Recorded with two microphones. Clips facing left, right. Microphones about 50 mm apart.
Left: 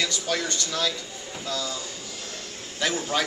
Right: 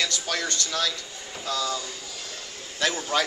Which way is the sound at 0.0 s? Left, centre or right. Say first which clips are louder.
Left 1 dB; centre.